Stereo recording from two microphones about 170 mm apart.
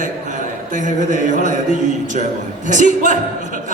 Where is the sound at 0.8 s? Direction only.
45° right (ahead or behind).